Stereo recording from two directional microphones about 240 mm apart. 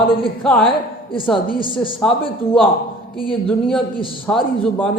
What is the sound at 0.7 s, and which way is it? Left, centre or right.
A woman's voice, left.